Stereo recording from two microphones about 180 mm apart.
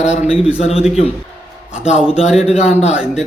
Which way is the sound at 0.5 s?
35° left (ahead or behind).